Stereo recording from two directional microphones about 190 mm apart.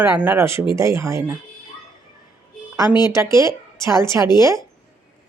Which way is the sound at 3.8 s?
15° right (ahead or behind).